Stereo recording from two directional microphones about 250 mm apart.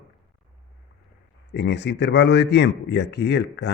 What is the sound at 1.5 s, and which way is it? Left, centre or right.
A man's voice, left.